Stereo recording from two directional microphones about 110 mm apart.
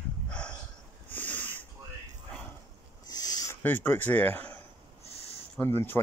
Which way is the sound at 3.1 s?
35° left (ahead or behind).